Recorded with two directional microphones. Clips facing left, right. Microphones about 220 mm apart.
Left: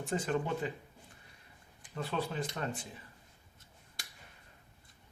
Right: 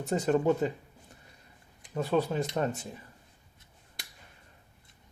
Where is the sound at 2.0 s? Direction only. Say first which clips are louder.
Right 8 dB; 40° right (ahead or behind).